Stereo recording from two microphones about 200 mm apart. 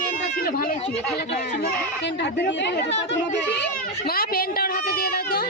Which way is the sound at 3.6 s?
50° left (ahead or behind).